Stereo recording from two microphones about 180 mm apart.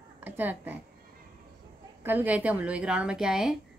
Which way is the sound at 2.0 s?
10° right (ahead or behind).